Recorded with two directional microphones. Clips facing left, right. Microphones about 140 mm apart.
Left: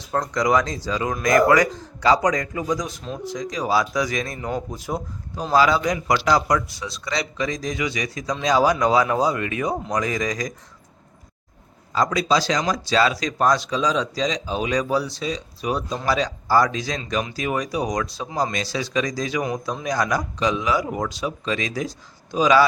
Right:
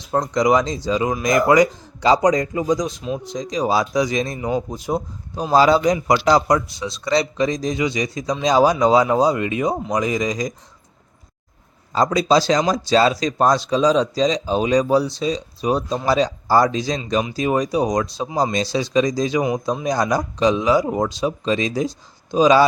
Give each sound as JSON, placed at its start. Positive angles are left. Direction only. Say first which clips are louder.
{"t": 0.0, "sound": "speech", "louder": "right 4 dB", "side_deg": -20}
{"t": 11.9, "sound": "speech", "louder": "right 4 dB", "side_deg": -25}